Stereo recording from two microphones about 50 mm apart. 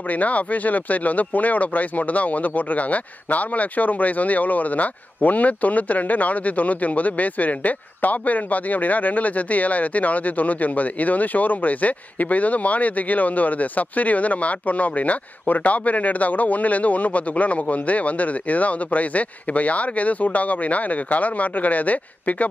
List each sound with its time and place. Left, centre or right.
0.1 s speech: left